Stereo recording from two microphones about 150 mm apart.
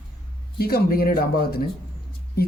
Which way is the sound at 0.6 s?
85° left.